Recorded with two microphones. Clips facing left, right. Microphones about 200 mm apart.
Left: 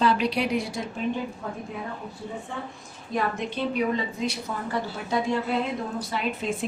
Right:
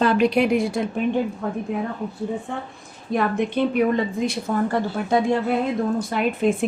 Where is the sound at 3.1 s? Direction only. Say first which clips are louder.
Right 6 dB; 60° right (ahead or behind).